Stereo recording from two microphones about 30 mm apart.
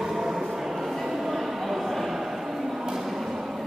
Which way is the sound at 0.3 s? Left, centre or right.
Centre.